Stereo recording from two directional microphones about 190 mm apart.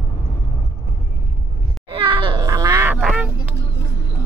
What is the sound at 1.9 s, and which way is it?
Quack, 25° right (ahead or behind).